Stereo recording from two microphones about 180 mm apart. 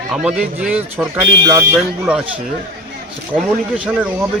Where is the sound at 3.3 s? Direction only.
5° right (ahead or behind).